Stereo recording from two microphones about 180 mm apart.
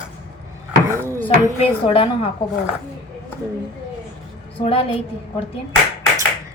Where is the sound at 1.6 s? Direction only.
30° left (ahead or behind).